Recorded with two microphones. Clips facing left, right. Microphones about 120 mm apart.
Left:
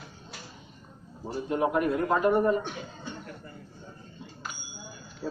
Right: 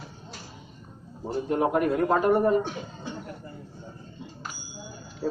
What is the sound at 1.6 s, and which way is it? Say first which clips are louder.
Speech: right 2 dB; 35° right (ahead or behind).